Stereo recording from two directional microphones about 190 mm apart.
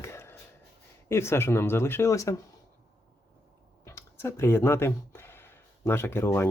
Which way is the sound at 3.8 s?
15° left (ahead or behind).